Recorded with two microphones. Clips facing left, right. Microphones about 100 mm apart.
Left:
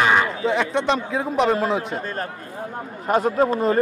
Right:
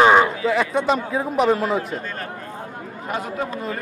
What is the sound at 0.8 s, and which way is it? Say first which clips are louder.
A man's voice: right 1 dB; 5° right (ahead or behind).